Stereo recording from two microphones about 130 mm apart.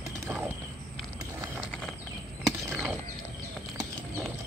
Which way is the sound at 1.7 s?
10° left (ahead or behind).